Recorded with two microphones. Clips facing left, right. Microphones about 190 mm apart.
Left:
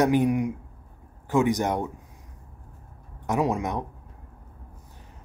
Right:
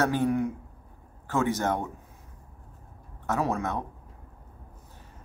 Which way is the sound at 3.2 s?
15° left (ahead or behind).